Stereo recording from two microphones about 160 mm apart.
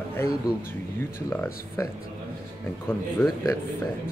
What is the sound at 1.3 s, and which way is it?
Speech, 10° left (ahead or behind).